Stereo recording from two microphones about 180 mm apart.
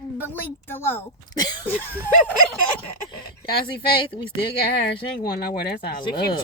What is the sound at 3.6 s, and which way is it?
Speech, 30° left (ahead or behind).